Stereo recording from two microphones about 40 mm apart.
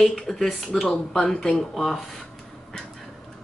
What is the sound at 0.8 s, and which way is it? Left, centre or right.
Speech, left.